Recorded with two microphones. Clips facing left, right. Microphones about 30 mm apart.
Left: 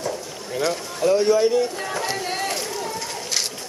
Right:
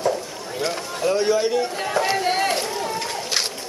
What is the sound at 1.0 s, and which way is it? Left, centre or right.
Speech, centre.